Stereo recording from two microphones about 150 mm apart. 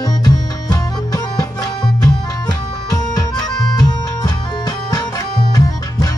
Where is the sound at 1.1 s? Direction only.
25° left (ahead or behind).